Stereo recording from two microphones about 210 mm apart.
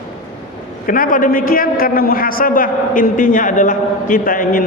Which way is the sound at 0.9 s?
40° left (ahead or behind).